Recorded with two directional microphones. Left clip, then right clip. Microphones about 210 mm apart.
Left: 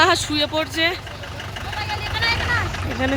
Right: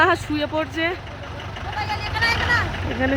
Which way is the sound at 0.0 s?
Centre (ahead or behind).